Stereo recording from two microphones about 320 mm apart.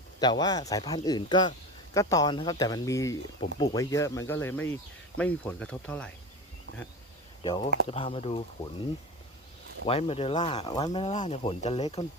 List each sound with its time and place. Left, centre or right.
0.2 s speech: centre
7.4 s speech: centre
9.8 s speech: centre